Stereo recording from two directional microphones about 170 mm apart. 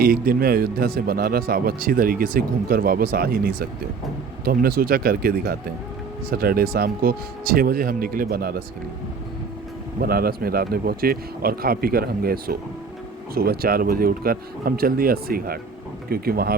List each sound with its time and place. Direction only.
0.0 s speech: 60° right (ahead or behind)
10.0 s speech: 60° right (ahead or behind)